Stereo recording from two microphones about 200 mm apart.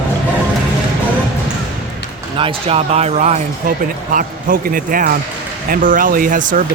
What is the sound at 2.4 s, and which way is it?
Speech, 25° right (ahead or behind).